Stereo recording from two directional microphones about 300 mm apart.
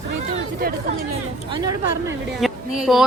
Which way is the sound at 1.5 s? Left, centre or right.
Centre.